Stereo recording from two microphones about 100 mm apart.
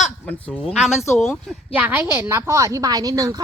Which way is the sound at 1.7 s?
20° right (ahead or behind).